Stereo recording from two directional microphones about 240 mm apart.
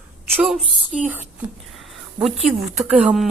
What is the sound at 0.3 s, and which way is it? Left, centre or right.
Speech, centre.